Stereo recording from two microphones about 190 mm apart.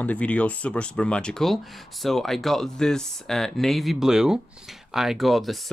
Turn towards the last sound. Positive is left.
turn(degrees=0)  # may be behind; listen again after turning